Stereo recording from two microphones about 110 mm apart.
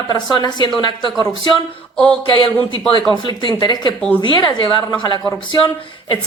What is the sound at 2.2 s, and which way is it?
Speech, 50° left (ahead or behind).